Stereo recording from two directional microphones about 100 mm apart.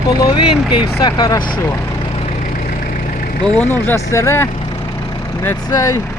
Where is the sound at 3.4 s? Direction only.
15° left (ahead or behind).